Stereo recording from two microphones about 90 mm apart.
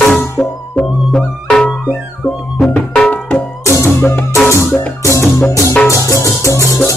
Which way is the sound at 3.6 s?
30° left (ahead or behind).